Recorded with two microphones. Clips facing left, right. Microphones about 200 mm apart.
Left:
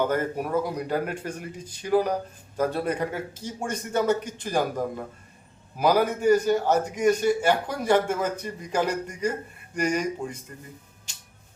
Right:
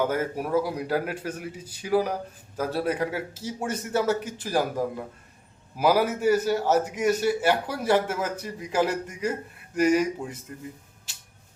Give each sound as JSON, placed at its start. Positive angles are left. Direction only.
{"t": 0.0, "sound": "a man's voice", "side_deg": -5}